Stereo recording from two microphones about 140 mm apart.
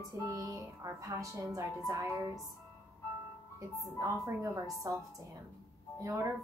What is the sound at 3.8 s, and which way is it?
Speech, 25° right (ahead or behind).